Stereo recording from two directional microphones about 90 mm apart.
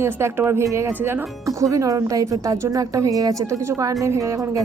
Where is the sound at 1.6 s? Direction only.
35° right (ahead or behind).